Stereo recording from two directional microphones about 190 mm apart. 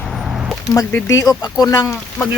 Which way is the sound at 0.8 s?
15° left (ahead or behind).